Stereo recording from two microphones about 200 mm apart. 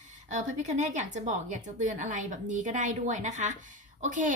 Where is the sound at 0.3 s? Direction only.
40° right (ahead or behind).